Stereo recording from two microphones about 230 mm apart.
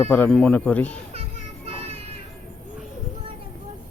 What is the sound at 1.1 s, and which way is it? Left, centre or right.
Music, right.